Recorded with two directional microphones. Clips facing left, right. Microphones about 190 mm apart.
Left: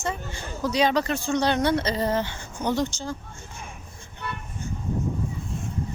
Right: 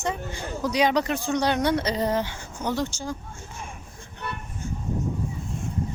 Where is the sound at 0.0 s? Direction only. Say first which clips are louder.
Right 2 dB; 15° right (ahead or behind).